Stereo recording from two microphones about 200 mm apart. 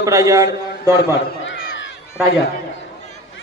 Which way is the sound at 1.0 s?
60° left (ahead or behind).